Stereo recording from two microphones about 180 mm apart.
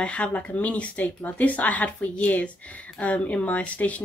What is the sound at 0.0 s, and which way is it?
Speech, 5° left (ahead or behind).